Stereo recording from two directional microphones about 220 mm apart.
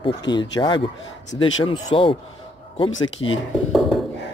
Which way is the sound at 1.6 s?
20° left (ahead or behind).